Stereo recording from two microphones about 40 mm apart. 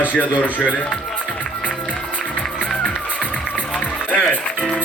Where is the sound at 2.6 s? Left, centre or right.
Left.